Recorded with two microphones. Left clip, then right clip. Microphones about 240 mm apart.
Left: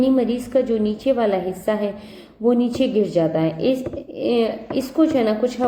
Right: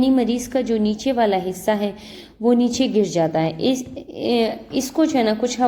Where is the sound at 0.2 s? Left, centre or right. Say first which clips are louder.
Left 2 dB; right.